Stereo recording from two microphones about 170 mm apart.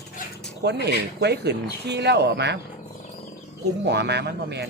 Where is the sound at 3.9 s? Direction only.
80° right.